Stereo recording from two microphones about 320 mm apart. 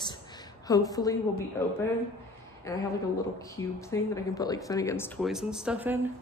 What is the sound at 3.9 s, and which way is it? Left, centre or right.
A woman's voice, centre.